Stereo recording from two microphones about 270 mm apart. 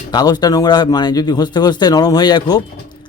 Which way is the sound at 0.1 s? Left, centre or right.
Centre.